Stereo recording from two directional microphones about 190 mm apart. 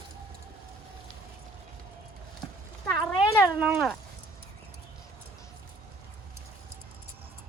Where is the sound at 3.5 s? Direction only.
5° right (ahead or behind).